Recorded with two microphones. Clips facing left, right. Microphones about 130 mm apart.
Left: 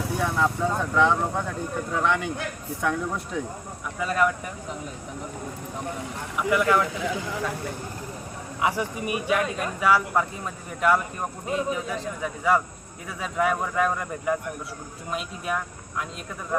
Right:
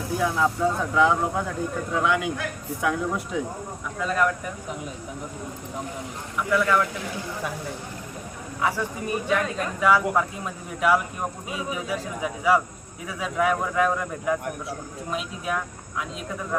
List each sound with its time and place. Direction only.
0.2 s speech: centre (ahead or behind)
6.5 s speech: 15° left (ahead or behind)
8.6 s a man's voice: 15° left (ahead or behind); by 16.0 s centre (ahead or behind)